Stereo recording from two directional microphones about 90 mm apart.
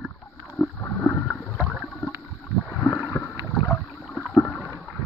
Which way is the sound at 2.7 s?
15° left (ahead or behind).